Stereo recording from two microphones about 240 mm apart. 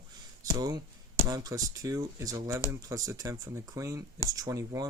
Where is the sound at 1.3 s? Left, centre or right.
Centre.